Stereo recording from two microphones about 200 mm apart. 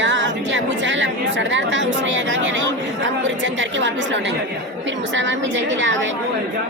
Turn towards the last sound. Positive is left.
turn(degrees=-70)  # may be behind; listen again after turning